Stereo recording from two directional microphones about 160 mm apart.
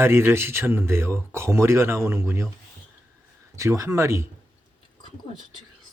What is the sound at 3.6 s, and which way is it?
Speech, 20° right (ahead or behind).